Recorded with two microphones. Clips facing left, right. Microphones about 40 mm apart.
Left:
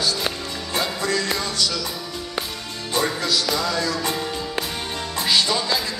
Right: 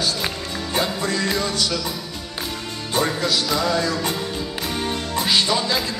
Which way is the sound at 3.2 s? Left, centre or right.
Centre.